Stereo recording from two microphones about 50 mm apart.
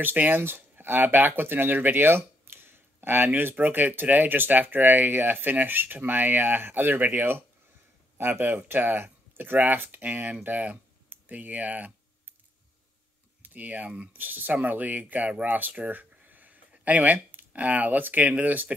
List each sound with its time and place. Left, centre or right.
0.0 s speech: right
13.4 s speech: right